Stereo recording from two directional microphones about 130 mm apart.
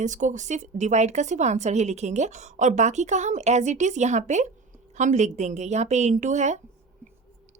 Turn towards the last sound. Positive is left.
turn(degrees=-65)  # may be behind; listen again after turning